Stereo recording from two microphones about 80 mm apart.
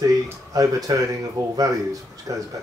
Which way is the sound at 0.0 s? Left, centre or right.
Right.